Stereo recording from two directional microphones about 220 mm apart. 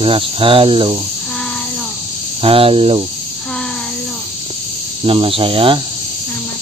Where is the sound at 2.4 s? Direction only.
25° right (ahead or behind).